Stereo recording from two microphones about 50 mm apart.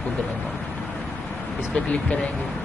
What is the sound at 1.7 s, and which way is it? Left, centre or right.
Speech, left.